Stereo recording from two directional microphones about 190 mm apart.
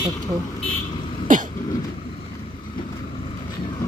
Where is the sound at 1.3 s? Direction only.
45° right (ahead or behind).